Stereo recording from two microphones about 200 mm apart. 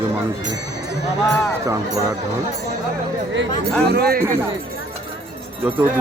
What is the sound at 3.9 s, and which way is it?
Speech, 50° right (ahead or behind).